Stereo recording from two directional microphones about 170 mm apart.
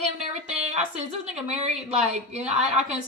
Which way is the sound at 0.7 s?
40° right (ahead or behind).